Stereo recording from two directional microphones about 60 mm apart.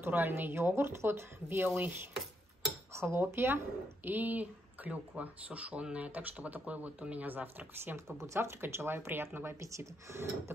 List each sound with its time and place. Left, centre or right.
0.0 s speech: right
2.9 s dishes: right
3.3 s speech: right
4.1 s speech: right
9.6 s speech: right